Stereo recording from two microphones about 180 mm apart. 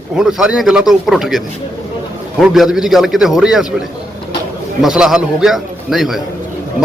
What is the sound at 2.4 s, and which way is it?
Speech, centre (ahead or behind).